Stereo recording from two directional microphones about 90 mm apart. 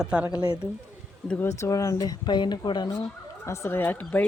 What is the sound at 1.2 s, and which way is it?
Speech, 20° left (ahead or behind).